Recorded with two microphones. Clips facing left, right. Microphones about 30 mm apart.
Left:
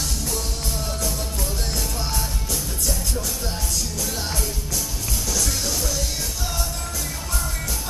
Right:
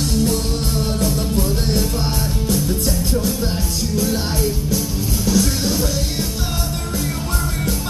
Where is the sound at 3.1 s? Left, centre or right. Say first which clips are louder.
Right 8 dB; right.